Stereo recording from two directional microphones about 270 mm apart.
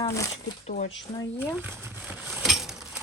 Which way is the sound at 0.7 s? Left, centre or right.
Left.